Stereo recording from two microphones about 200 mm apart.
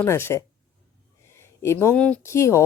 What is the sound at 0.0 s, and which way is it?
Speech, 10° left (ahead or behind).